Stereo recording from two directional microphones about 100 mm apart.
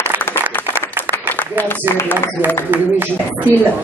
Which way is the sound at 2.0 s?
20° left (ahead or behind).